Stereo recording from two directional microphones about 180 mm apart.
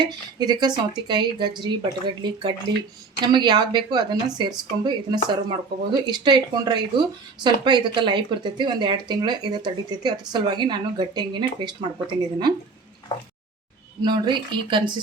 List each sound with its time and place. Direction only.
0.0 s speech: 25° right (ahead or behind)
14.0 s speech: 25° right (ahead or behind)